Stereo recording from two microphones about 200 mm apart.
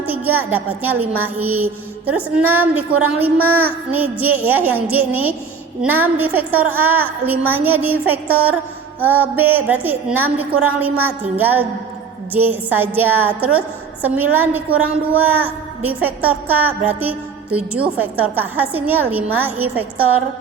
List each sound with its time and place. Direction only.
0.0 s a woman's voice: 10° right (ahead or behind)